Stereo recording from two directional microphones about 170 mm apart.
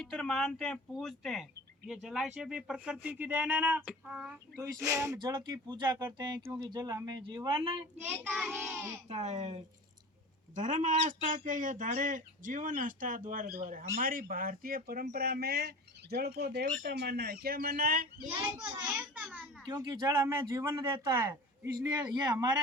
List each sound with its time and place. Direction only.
0.0 s speech: 5° left (ahead or behind)
4.6 s speech: 20° right (ahead or behind)
8.0 s child singing: 10° right (ahead or behind)
9.0 s speech: 40° right (ahead or behind); by 18.1 s 60° right (ahead or behind)
18.3 s speech: 25° right (ahead or behind)
18.8 s child singing: 10° right (ahead or behind)
19.6 s speech: 25° right (ahead or behind)